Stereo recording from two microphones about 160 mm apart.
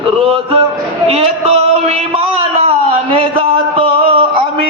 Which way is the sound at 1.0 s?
40° right (ahead or behind).